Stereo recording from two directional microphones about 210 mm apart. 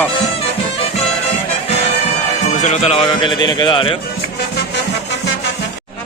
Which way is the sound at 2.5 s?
35° left (ahead or behind).